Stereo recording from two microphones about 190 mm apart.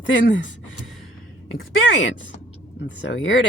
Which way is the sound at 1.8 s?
80° left.